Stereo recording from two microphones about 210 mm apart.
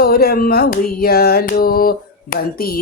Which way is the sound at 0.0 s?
45° left (ahead or behind).